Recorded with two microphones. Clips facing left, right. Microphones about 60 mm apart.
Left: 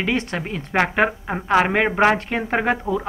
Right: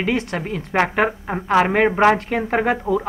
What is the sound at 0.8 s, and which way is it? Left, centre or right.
Speech, left.